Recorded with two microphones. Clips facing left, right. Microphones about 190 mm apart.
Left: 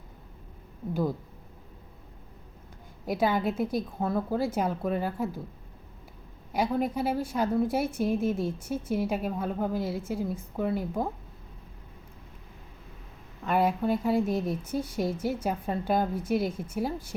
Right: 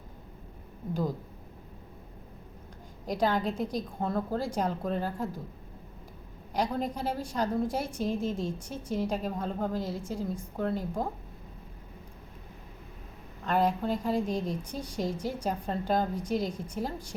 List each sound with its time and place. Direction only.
3.1 s speech: 5° left (ahead or behind)
6.5 s speech: 5° left (ahead or behind)
13.4 s speech: 5° left (ahead or behind)